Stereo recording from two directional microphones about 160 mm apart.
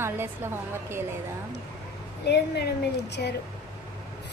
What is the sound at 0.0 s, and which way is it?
A woman's voice, 15° right (ahead or behind).